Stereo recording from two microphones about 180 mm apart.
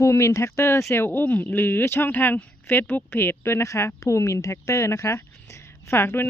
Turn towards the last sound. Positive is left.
turn(degrees=10)  # may be behind; listen again after turning